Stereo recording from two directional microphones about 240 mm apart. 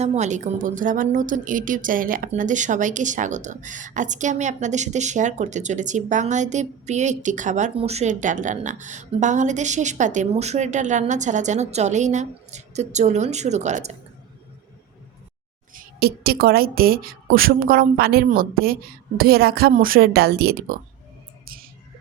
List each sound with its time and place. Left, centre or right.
0.0 s a woman's voice: right
15.7 s a woman's voice: right
21.4 s a sound: right